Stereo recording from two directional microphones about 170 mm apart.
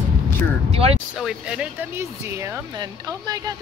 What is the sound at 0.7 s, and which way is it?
Speech, 35° right (ahead or behind).